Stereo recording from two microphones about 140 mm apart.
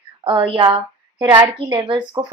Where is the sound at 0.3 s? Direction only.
35° right (ahead or behind).